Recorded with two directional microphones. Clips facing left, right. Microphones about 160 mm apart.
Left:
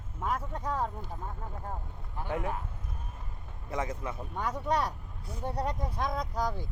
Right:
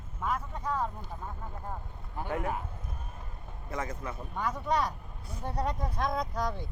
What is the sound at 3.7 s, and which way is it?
Speech, 20° left (ahead or behind).